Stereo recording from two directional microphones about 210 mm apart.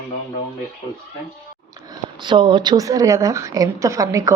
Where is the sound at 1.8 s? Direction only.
20° right (ahead or behind).